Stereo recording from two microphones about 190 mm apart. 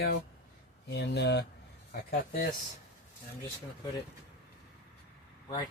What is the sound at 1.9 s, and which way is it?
Speech, 50° left (ahead or behind).